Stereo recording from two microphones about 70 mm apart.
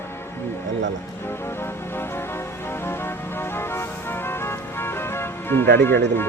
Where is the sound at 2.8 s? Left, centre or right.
Left.